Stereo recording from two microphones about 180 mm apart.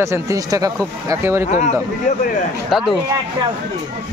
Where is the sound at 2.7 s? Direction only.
Centre (ahead or behind).